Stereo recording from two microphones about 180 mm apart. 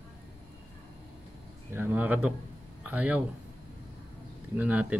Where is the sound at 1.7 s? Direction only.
10° right (ahead or behind).